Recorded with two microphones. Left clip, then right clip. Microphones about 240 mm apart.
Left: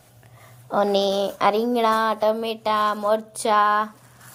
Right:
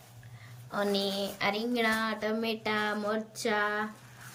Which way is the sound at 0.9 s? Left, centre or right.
Centre.